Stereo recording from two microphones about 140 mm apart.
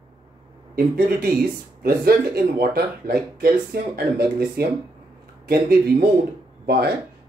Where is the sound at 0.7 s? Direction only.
90° right.